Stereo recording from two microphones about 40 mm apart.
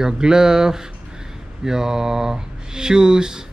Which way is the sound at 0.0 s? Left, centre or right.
Centre.